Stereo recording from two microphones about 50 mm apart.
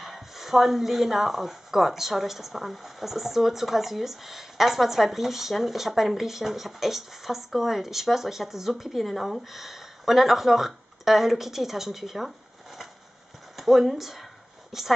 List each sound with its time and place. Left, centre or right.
0.0 s speech: centre
13.6 s speech: centre